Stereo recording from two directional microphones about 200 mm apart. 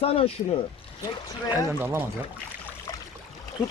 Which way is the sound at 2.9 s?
20° left (ahead or behind).